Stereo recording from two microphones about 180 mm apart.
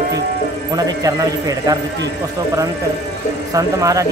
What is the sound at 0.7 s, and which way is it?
Speech, 20° right (ahead or behind).